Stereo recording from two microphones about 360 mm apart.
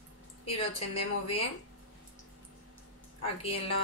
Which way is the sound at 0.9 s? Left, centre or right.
Centre.